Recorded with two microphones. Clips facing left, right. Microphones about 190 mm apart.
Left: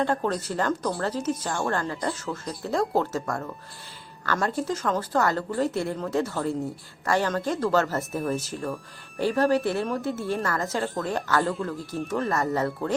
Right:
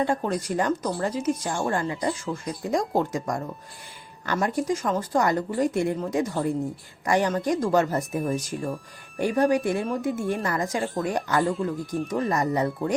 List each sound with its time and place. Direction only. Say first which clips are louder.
0.0 s a woman's voice: even; 10° right (ahead or behind)